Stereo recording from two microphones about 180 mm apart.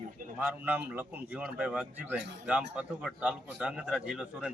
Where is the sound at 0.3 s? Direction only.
10° right (ahead or behind).